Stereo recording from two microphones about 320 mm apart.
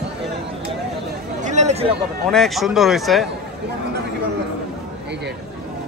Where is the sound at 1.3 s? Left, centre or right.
Right.